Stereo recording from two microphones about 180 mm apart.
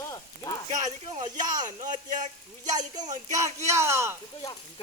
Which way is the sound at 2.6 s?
20° right (ahead or behind).